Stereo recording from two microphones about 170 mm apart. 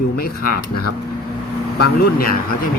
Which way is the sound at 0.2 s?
60° left (ahead or behind).